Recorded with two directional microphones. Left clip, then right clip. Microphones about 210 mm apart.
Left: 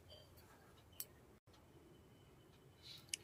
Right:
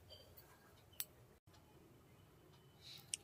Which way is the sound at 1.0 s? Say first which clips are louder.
Right 4 dB; 10° left (ahead or behind).